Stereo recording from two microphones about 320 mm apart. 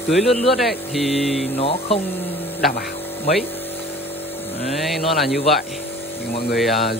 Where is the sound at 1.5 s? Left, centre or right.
Centre.